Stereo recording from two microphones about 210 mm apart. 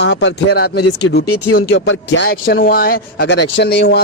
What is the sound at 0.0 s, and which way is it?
Speech, 55° left (ahead or behind).